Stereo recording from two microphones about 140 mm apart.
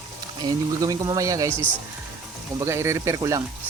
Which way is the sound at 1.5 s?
10° left (ahead or behind).